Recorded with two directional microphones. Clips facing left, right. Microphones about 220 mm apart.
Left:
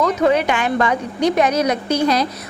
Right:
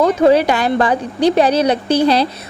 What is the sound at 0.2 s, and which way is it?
A woman's voice, 35° right (ahead or behind).